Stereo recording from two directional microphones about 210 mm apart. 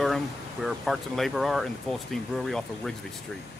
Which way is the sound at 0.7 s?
Centre (ahead or behind).